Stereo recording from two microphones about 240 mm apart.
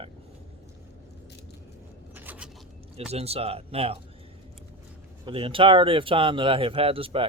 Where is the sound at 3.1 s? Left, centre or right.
Right.